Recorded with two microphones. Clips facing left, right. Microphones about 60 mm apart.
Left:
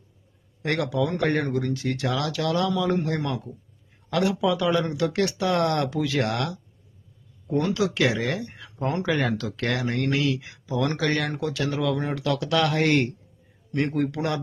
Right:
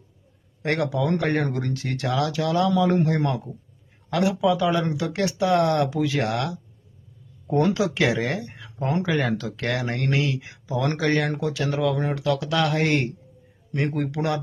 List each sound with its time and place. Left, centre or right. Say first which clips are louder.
0.6 s a man's voice: right 1 dB; right
1.0 s speech: even; centre
1.5 s speech: left 2 dB; right
2.0 s a man's voice: right 3 dB; right
4.1 s speech: right 2 dB; centre
7.4 s speech: right 4 dB; right
7.8 s speech: right 1 dB; centre
8.2 s speech: right 1 dB; right
9.3 s a man's voice: right 1 dB; right
11.3 s speech: right 1 dB; centre